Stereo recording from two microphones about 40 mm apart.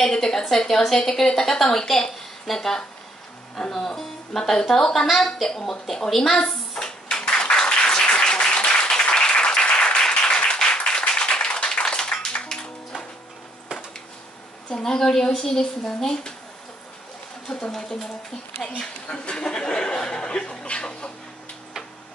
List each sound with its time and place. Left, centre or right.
0.0 s a woman's voice: centre
6.0 s a sound: centre; by 10.0 s left
10.1 s applause: left
14.8 s a woman's voice: centre
17.5 s a woman's voice: centre
18.8 s speech: left